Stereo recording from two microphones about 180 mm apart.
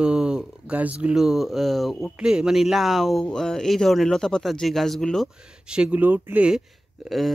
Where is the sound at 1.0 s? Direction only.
5° right (ahead or behind).